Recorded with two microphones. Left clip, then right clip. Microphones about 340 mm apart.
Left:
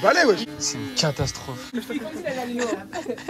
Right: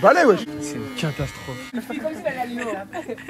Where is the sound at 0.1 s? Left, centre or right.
Centre.